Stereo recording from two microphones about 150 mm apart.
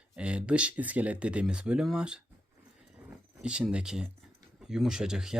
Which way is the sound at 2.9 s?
5° right (ahead or behind).